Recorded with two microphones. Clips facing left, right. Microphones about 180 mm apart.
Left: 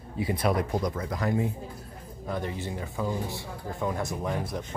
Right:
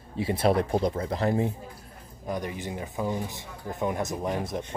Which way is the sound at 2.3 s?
15° right (ahead or behind).